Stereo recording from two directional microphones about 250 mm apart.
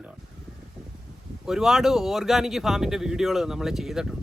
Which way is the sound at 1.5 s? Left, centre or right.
Centre.